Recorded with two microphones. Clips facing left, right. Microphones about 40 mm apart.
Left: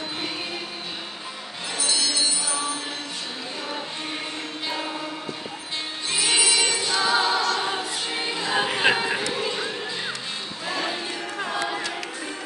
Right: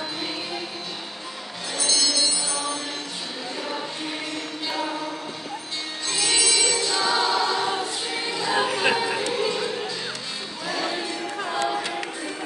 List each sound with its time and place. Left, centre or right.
1.8 s music: centre
6.0 s music: centre
7.6 s choir: centre
8.7 s chatter: left
9.3 s music: left
10.7 s music: left
11.3 s music: centre